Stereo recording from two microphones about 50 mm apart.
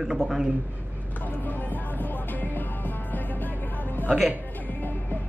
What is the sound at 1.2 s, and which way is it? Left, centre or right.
Music, left.